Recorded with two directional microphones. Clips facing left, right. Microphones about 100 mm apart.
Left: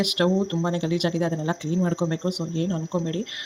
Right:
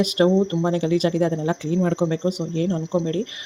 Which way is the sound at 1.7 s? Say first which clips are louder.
Right 3 dB; 60° right (ahead or behind).